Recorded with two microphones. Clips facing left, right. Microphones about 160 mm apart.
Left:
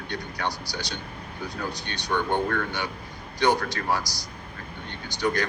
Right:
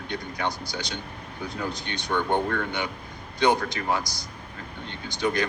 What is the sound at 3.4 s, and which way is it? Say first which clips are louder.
Speech: right 1 dB; 20° right (ahead or behind).